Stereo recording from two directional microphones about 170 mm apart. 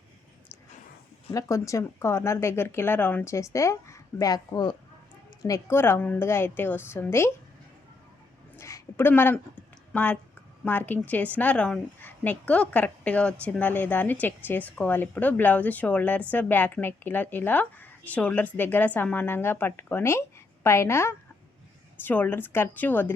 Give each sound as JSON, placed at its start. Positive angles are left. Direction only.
{"t": 1.3, "sound": "a woman's voice", "side_deg": 20}
{"t": 8.5, "sound": "a sound", "side_deg": 15}
{"t": 10.6, "sound": "a woman's voice", "side_deg": 10}